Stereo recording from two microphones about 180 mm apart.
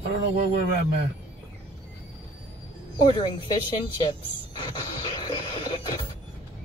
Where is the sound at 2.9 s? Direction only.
25° left (ahead or behind).